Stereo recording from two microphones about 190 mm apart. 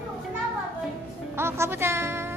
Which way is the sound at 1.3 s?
10° right (ahead or behind).